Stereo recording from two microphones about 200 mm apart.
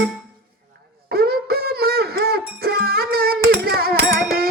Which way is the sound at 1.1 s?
50° right (ahead or behind).